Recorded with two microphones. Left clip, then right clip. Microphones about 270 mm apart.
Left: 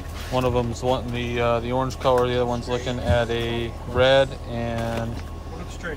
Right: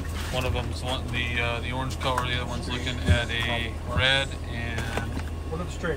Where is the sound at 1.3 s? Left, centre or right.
Centre.